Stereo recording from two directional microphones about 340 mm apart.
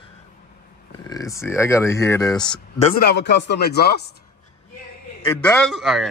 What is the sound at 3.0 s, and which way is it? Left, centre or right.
Speech, left.